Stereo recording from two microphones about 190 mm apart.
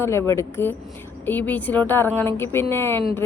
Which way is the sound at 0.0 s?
15° left (ahead or behind).